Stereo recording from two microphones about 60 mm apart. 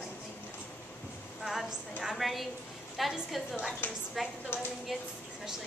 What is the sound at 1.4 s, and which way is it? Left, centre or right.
A woman's voice, centre.